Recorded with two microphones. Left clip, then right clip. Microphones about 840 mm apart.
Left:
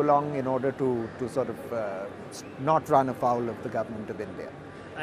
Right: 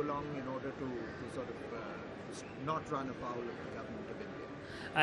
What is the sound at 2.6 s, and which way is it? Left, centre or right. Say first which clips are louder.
Speech: left 16 dB; left.